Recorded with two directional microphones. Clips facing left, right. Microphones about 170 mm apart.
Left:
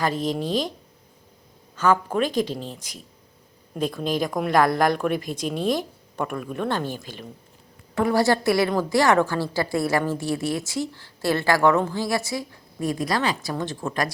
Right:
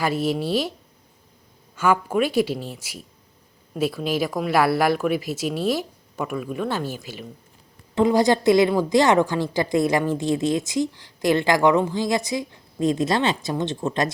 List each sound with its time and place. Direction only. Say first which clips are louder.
0.0 s speech: right 2 dB; 10° right (ahead or behind)
1.7 s speech: right 1 dB; 10° right (ahead or behind)
7.9 s a woman's voice: right 2 dB; 20° right (ahead or behind)